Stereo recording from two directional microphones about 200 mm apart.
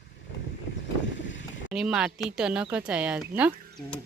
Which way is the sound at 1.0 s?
65° left (ahead or behind).